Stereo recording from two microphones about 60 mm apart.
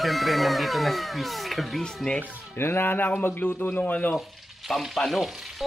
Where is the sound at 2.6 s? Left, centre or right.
Left.